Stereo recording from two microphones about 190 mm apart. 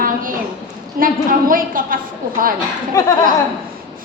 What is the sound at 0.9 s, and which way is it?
A woman's voice, 45° right (ahead or behind).